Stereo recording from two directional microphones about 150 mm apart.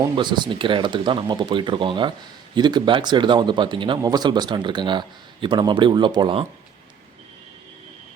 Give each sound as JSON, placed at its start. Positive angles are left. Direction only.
{"t": 0.2, "sound": "speech", "side_deg": -30}